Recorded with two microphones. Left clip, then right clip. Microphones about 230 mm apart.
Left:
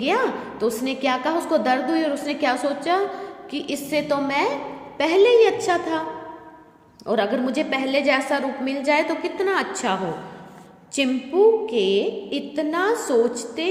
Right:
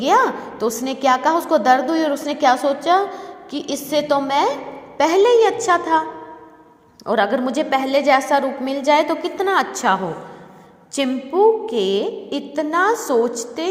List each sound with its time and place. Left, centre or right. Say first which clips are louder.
0.0 s a woman's voice: right 6 dB; centre
7.0 s a woman's voice: right 4 dB; centre